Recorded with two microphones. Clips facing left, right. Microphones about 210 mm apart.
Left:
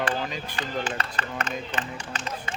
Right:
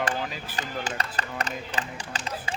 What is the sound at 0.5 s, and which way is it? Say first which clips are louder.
Speech: left 1 dB; 40° right (ahead or behind).